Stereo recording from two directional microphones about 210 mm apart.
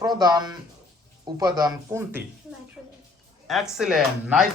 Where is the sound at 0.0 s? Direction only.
20° right (ahead or behind).